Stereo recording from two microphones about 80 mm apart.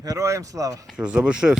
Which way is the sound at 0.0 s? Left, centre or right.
Right.